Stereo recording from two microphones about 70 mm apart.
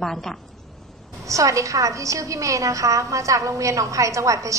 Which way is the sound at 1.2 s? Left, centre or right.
Right.